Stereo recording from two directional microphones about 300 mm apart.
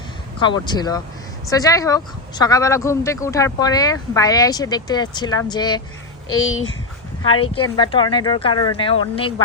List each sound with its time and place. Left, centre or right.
0.3 s speech: centre
6.4 s speech: left
7.4 s speech: centre